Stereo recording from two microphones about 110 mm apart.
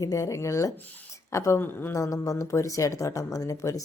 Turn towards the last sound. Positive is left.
turn(degrees=30)  # may be behind; listen again after turning